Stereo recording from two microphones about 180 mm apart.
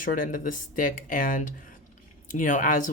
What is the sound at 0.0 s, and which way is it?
Speech, 50° left (ahead or behind).